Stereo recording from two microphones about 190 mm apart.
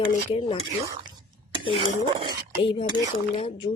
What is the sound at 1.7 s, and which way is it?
Dishes, 30° right (ahead or behind).